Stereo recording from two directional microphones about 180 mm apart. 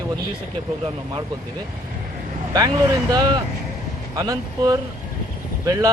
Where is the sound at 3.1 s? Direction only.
25° right (ahead or behind).